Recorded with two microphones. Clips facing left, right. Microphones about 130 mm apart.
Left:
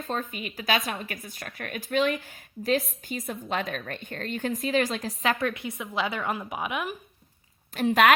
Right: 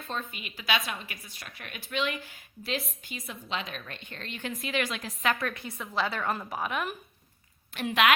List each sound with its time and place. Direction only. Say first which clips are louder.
0.0 s a woman's voice: left 5 dB; 40° left (ahead or behind); by 6.9 s 10° left (ahead or behind)
7.7 s a woman's voice: left 5 dB; 40° left (ahead or behind)